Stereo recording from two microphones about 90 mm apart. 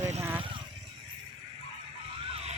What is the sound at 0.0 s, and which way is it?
Vehicle, 30° right (ahead or behind).